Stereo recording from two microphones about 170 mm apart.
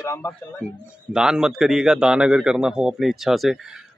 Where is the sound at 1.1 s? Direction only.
5° right (ahead or behind).